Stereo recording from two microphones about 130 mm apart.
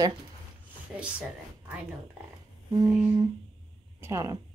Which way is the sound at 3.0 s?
35° right (ahead or behind).